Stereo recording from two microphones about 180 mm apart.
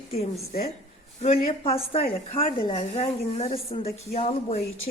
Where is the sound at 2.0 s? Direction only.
50° left (ahead or behind).